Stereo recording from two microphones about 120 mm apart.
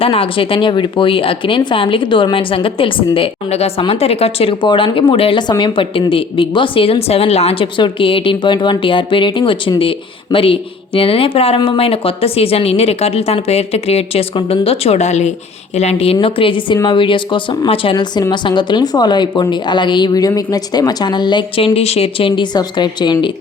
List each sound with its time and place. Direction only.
0.0 s speech: 50° left (ahead or behind)
7.8 s speech: 45° left (ahead or behind)
16.2 s a woman's voice: 45° left (ahead or behind)